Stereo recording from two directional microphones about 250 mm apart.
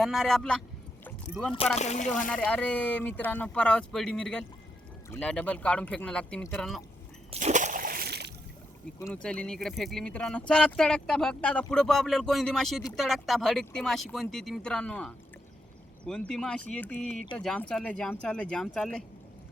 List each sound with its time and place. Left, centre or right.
0.0 s speech: centre
1.0 s rowboat: centre
1.8 s speech: left
2.3 s speech: centre
7.3 s splash: right
9.0 s speech: centre